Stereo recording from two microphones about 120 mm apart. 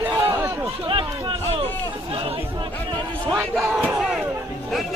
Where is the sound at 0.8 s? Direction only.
45° right (ahead or behind).